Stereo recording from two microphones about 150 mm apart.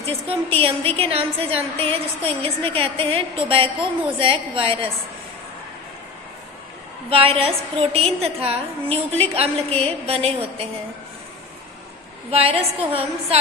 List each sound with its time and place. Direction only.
0.0 s a woman's voice: 40° right (ahead or behind)
7.1 s a woman's voice: 40° right (ahead or behind)
12.3 s a woman's voice: 40° right (ahead or behind)